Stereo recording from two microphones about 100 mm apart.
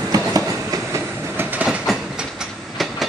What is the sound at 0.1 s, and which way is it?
Train, 40° right (ahead or behind).